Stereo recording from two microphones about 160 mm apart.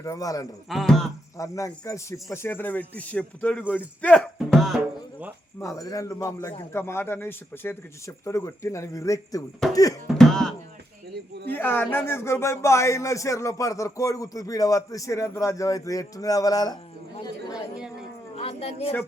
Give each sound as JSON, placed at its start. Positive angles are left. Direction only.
{"t": 0.0, "sound": "speech", "side_deg": 20}
{"t": 0.7, "sound": "music", "side_deg": 0}
{"t": 1.4, "sound": "speech", "side_deg": 20}
{"t": 4.4, "sound": "music", "side_deg": 0}
{"t": 5.5, "sound": "speech", "side_deg": 20}
{"t": 9.6, "sound": "music", "side_deg": 0}
{"t": 10.2, "sound": "speech", "side_deg": 5}
{"t": 11.5, "sound": "speech", "side_deg": 10}
{"t": 18.3, "sound": "a sound", "side_deg": 40}